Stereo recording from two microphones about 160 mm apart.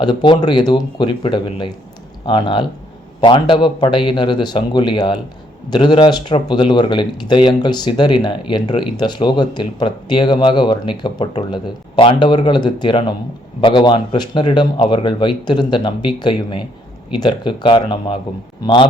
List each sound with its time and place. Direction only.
0.0 s speech: 30° left (ahead or behind)